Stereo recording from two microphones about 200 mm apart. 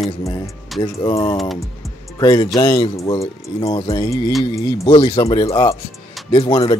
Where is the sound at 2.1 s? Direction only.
20° left (ahead or behind).